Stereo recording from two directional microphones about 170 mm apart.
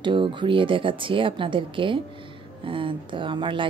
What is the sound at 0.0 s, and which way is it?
A woman's voice, 30° right (ahead or behind).